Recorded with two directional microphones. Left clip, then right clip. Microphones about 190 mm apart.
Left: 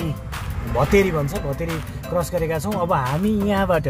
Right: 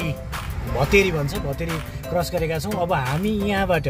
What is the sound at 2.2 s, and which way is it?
Speech, 5° left (ahead or behind).